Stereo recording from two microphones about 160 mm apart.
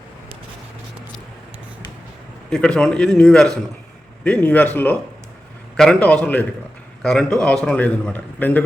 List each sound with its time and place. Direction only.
2.5 s a man's voice: 5° left (ahead or behind)